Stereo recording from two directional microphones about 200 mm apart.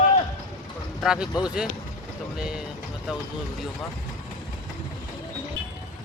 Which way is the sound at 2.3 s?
5° right (ahead or behind).